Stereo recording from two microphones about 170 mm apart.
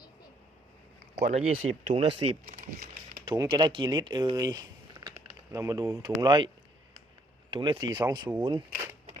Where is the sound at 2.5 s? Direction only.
45° right (ahead or behind).